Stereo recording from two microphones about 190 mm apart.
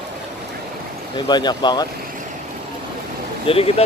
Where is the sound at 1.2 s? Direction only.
25° left (ahead or behind).